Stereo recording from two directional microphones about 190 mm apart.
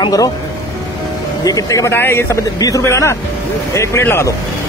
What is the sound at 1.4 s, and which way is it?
Speech, 20° left (ahead or behind).